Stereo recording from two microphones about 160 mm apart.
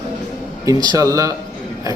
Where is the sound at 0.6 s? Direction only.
20° right (ahead or behind).